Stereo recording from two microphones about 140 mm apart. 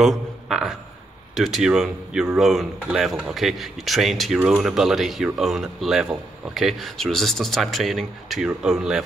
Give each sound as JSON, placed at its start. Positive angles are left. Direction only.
{"t": 0.0, "sound": "a man's voice", "side_deg": 0}